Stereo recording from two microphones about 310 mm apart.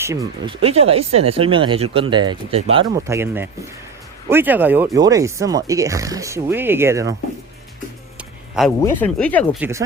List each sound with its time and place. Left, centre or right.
0.0 s speech: centre
8.5 s speech: centre